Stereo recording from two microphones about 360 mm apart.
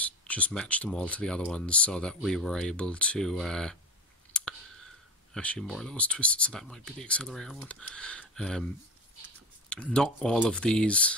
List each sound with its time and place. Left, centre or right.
0.0 s speech: centre
4.3 s clicking: centre
5.3 s speech: centre
9.7 s speech: centre